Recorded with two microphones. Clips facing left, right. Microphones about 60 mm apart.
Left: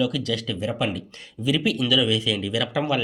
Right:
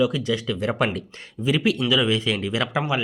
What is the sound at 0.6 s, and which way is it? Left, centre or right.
Speech, right.